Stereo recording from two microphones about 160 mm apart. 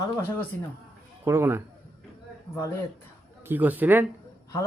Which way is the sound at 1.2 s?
15° right (ahead or behind).